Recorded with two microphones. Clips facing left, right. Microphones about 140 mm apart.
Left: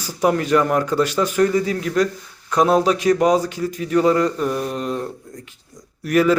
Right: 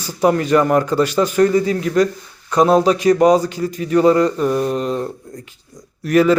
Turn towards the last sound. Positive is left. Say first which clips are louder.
# right 3 dB
turn(degrees=0)  # may be behind; listen again after turning